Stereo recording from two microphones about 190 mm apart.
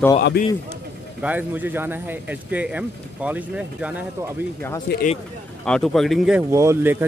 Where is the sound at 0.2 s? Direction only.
55° left (ahead or behind).